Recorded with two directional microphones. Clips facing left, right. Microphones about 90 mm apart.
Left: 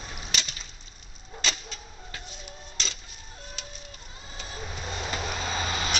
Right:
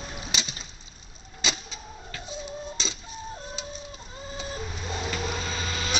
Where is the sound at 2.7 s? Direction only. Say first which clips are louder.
Right 2 dB; 15° right (ahead or behind).